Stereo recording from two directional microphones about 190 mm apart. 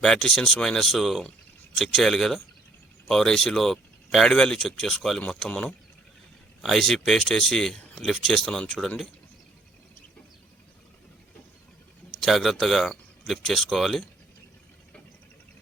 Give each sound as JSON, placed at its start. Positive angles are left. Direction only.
{"t": 0.0, "sound": "speech", "side_deg": 5}
{"t": 12.2, "sound": "speech", "side_deg": 0}